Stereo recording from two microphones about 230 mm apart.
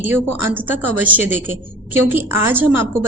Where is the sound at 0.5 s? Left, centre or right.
Centre.